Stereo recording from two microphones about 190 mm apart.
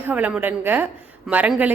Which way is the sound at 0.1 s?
5° right (ahead or behind).